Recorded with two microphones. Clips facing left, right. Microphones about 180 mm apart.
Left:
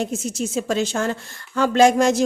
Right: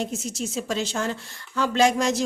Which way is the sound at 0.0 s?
50° left (ahead or behind).